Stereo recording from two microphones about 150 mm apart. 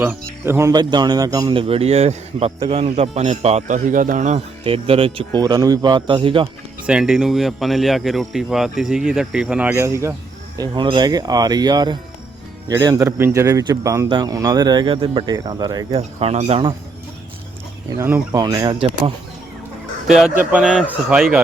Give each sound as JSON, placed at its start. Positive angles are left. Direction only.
{"t": 0.0, "sound": "a man's voice", "side_deg": -15}
{"t": 6.8, "sound": "speech", "side_deg": -5}
{"t": 10.6, "sound": "speech", "side_deg": -30}
{"t": 15.9, "sound": "speech", "side_deg": -40}
{"t": 17.9, "sound": "speech", "side_deg": -15}
{"t": 20.1, "sound": "speech", "side_deg": -5}